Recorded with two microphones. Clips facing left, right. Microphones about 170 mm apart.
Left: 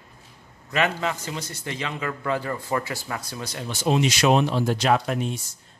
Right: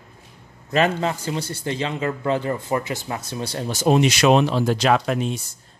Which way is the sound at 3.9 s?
65° right (ahead or behind).